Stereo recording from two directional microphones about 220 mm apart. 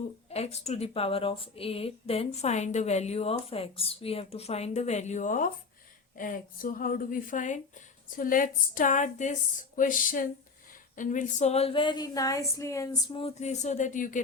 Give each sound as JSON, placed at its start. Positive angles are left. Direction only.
{"t": 0.3, "sound": "a woman's voice", "side_deg": 30}
{"t": 13.1, "sound": "a woman's voice", "side_deg": 30}